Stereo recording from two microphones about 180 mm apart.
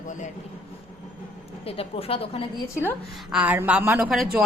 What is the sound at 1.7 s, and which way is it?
Speech, 30° left (ahead or behind).